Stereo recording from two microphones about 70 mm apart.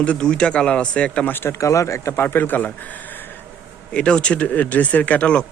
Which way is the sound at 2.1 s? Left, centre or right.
Left.